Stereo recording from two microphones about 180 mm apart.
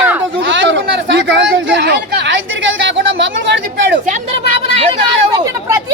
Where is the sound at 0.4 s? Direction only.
90° right.